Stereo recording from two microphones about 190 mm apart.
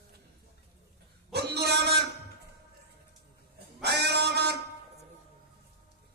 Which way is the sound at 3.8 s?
60° right (ahead or behind).